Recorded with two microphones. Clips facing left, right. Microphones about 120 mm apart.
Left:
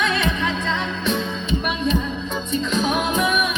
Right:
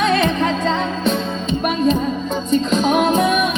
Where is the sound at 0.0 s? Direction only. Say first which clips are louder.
Right 6 dB; 40° right (ahead or behind).